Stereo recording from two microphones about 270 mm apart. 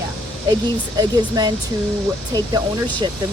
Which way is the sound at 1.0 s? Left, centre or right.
Centre.